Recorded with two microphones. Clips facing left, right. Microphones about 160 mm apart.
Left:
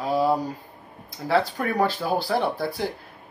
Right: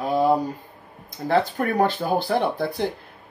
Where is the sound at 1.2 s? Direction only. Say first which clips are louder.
Right 2 dB; 45° right (ahead or behind).